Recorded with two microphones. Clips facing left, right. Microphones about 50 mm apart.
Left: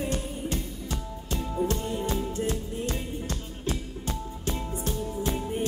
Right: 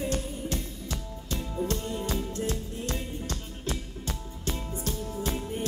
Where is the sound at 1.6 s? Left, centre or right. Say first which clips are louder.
Left 3 dB; centre.